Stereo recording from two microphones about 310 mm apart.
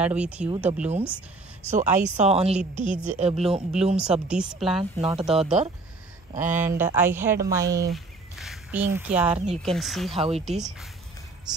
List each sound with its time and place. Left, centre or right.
0.0 s speech: centre
1.6 s speech: right
3.9 s speech: centre
5.0 s speech: centre
6.6 s a woman's voice: centre
10.1 s speech: centre
10.4 s speech: centre